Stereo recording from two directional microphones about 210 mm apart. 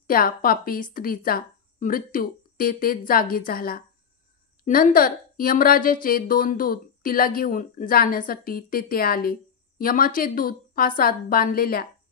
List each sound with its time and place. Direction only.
0.0 s speech: 45° left (ahead or behind)